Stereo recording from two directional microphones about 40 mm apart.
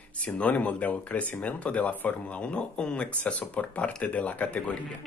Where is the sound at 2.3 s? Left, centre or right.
Left.